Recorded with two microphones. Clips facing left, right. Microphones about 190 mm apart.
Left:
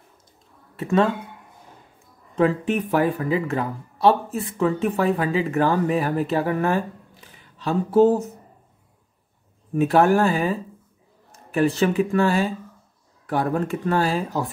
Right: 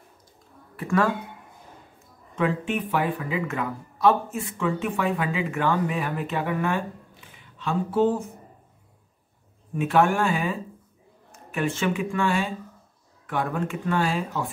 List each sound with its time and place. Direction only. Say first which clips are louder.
0.7 s speech: left 3 dB; 25° left (ahead or behind)
2.3 s speech: left 5 dB; 40° left (ahead or behind)
9.8 s speech: left 4 dB; 40° left (ahead or behind)